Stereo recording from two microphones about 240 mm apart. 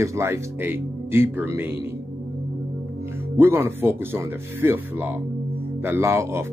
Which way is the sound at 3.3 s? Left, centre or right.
Centre.